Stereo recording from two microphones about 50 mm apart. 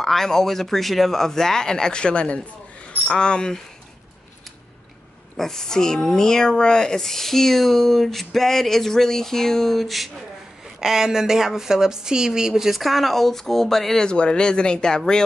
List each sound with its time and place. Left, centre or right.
0.0 s speech: centre
5.4 s speech: centre
14.1 s speech: centre